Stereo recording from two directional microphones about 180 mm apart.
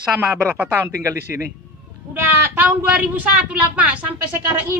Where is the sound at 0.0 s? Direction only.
10° right (ahead or behind).